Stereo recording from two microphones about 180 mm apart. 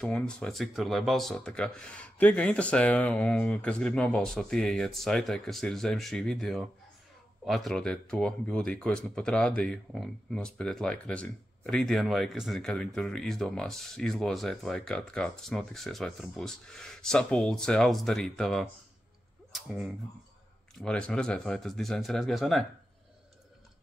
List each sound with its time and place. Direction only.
0.0 s speech: 5° left (ahead or behind)